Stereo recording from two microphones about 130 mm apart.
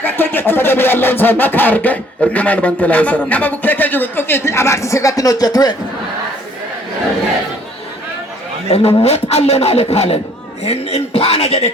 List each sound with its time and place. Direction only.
0.0 s music: 15° left (ahead or behind)
9.0 s speech: 50° left (ahead or behind)